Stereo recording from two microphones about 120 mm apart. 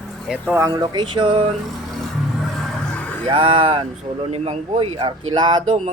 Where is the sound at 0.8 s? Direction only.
40° right (ahead or behind).